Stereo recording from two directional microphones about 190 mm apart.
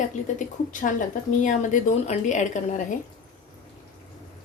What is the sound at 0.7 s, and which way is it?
Speech, 45° left (ahead or behind).